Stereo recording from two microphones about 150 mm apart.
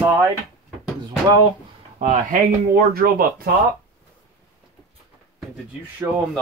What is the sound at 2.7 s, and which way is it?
Speech, 85° right.